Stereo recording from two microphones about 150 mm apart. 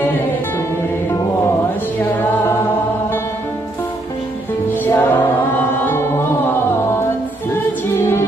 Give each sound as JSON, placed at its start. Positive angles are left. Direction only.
{"t": 4.9, "sound": "choir", "side_deg": 15}
{"t": 5.9, "sound": "music", "side_deg": 15}